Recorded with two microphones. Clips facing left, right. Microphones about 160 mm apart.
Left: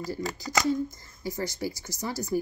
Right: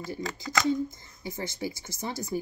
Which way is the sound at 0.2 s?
5° left (ahead or behind).